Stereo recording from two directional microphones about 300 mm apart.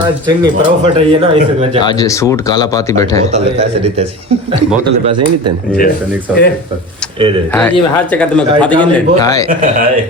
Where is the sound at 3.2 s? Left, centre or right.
Right.